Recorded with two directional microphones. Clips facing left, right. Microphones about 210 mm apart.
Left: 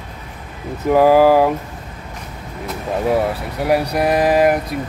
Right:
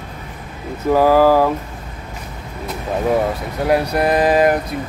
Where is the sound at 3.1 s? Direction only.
10° left (ahead or behind).